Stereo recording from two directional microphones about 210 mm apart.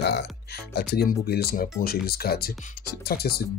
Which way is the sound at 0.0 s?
55° left (ahead or behind).